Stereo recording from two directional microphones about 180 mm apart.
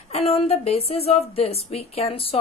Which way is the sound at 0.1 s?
35° left (ahead or behind).